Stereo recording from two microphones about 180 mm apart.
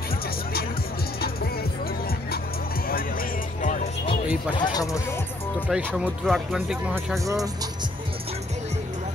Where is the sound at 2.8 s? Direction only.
55° left (ahead or behind).